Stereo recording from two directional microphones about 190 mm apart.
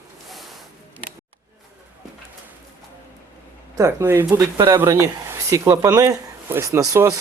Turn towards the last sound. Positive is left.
turn(degrees=-15)  # may be behind; listen again after turning